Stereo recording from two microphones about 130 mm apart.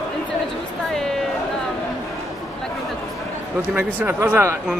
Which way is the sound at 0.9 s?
5° left (ahead or behind).